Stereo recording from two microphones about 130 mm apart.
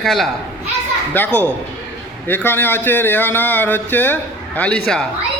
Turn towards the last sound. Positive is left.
turn(degrees=5)  # may be behind; listen again after turning